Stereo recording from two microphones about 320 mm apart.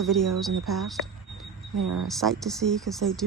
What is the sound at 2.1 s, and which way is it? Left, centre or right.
Speech, centre.